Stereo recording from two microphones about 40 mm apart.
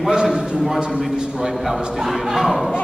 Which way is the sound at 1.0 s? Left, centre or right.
Centre.